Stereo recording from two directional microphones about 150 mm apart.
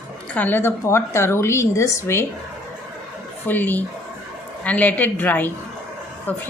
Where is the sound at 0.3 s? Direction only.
15° left (ahead or behind).